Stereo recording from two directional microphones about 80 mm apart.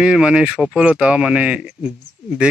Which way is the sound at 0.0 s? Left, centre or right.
Centre.